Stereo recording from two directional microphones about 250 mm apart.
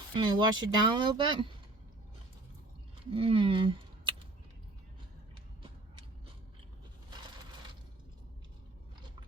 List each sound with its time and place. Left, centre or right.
0.1 s speech: centre
3.1 s speech: right